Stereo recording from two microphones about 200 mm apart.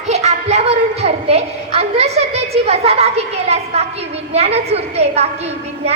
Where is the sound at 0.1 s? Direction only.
35° right (ahead or behind).